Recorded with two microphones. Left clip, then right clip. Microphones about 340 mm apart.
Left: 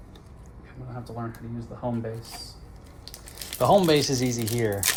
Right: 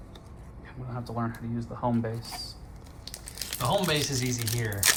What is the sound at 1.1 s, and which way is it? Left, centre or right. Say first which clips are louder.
Speech: right 4 dB; centre.